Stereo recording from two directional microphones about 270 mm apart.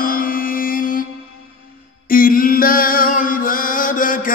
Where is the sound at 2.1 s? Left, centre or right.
Left.